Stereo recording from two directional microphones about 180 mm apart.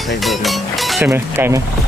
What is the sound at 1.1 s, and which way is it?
Speech, 10° right (ahead or behind).